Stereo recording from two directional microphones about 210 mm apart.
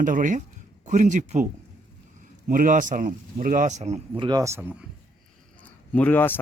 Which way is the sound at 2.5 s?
40° right (ahead or behind).